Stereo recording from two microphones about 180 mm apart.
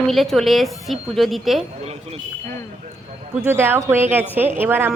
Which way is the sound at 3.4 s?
15° right (ahead or behind).